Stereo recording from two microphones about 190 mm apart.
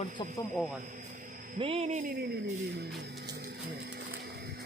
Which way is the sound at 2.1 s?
55° right (ahead or behind).